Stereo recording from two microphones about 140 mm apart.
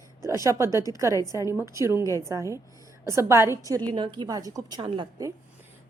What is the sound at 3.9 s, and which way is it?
Speech, 35° right (ahead or behind).